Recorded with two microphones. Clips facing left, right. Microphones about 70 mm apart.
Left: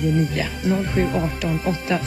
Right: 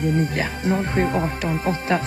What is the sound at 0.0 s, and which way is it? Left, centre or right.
Music, right.